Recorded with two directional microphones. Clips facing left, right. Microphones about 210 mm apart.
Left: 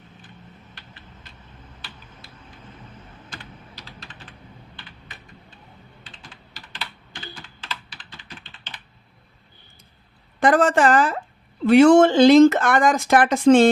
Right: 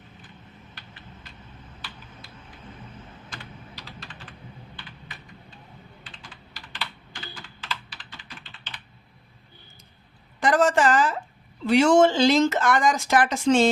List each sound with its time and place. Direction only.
10.4 s speech: 55° left (ahead or behind)